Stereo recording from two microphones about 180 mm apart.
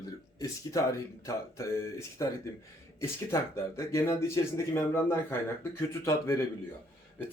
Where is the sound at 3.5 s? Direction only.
15° left (ahead or behind).